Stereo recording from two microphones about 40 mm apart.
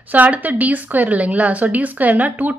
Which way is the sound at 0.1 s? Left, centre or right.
Right.